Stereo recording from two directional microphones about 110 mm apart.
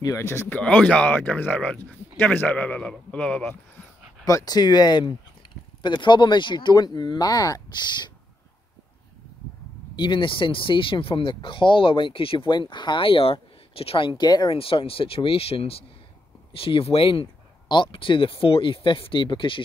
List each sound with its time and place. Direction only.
0.0 s speech: 30° left (ahead or behind)
0.6 s speech: 10° left (ahead or behind)
4.2 s speech: 30° left (ahead or behind)
9.9 s speech: 45° left (ahead or behind)
12.5 s speech: 45° left (ahead or behind)
14.5 s speech: 55° left (ahead or behind)